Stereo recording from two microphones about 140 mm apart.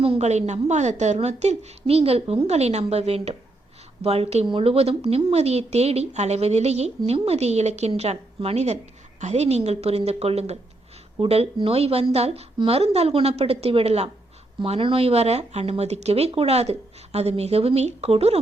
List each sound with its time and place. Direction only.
0.0 s a woman's voice: 45° right (ahead or behind)